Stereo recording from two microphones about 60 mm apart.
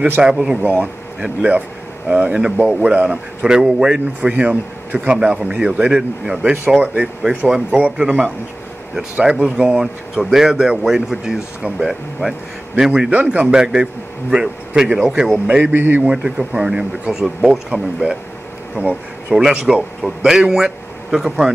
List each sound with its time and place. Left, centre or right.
0.2 s a man's voice: centre
0.6 s a man's voice: right; by 7.6 s centre
7.7 s a man's voice: right
13.1 s a man's voice: right; by 15.4 s centre
15.4 s a man's voice: right
19.3 s a man's voice: centre